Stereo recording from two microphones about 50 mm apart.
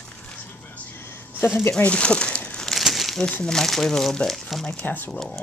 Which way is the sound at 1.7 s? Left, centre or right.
Left.